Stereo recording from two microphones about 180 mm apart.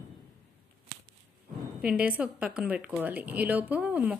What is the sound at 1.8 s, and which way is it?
A woman's voice, 10° right (ahead or behind).